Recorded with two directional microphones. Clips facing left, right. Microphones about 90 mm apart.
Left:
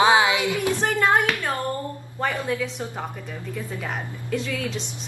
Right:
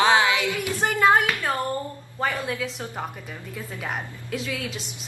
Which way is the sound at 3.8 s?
5° right (ahead or behind).